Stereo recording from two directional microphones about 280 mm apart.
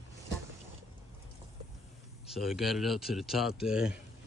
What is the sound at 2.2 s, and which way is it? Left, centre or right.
Speech, centre.